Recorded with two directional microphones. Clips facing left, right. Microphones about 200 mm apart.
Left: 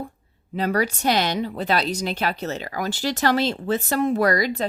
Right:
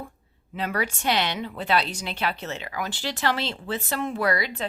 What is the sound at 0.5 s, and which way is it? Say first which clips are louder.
Speech: left 6 dB; 40° left (ahead or behind).